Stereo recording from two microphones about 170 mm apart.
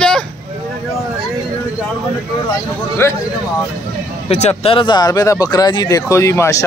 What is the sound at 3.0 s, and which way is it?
Speech, 15° left (ahead or behind).